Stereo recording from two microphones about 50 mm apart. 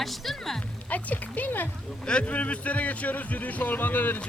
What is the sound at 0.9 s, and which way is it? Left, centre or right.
Speech, left.